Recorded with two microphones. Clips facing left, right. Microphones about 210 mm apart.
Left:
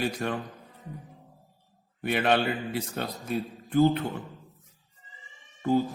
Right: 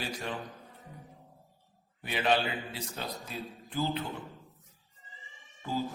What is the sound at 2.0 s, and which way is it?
Mantra, 60° left (ahead or behind).